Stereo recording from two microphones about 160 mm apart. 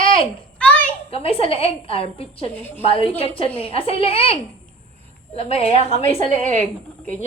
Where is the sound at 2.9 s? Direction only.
35° left (ahead or behind).